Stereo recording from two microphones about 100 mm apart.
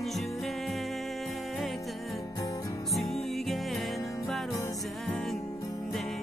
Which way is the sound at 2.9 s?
Centre (ahead or behind).